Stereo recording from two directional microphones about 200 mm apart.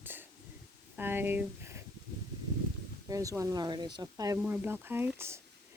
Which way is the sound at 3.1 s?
15° right (ahead or behind).